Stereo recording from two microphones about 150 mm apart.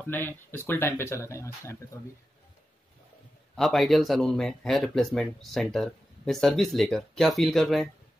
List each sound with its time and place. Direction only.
0.0 s speech: 15° left (ahead or behind)
3.5 s speech: centre (ahead or behind)